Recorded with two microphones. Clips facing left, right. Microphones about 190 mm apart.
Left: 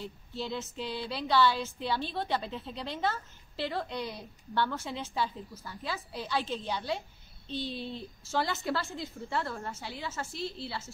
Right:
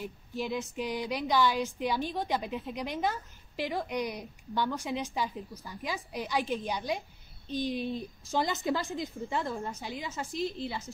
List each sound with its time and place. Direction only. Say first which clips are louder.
0.0 s speech: right 2 dB; 15° right (ahead or behind)